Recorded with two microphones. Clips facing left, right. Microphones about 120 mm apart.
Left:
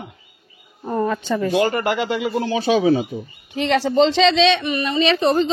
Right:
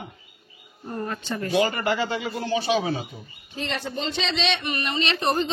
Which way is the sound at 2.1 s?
90° left.